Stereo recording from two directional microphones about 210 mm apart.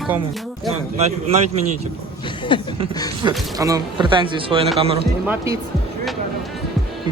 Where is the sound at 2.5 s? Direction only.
25° left (ahead or behind).